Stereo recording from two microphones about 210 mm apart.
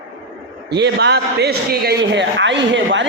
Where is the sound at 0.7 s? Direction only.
55° right (ahead or behind).